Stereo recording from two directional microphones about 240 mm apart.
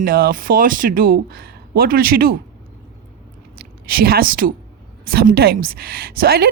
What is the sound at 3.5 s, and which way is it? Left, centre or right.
A woman's voice, right.